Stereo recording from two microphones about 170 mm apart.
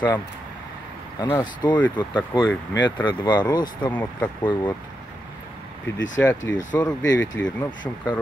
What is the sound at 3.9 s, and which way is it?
Speech, 10° left (ahead or behind).